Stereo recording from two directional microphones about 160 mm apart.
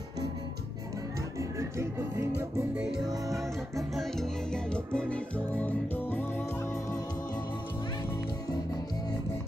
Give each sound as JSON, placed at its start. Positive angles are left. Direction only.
{"t": 1.6, "sound": "speech", "side_deg": -15}
{"t": 2.7, "sound": "music", "side_deg": -5}